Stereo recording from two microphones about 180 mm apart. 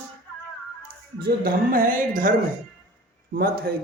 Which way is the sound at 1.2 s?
55° right (ahead or behind).